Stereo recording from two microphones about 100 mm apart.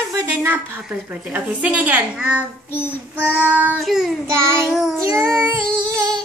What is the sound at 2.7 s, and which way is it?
Child singing, 20° left (ahead or behind).